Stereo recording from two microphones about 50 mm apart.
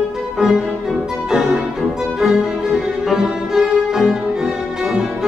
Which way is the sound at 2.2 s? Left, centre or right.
Centre.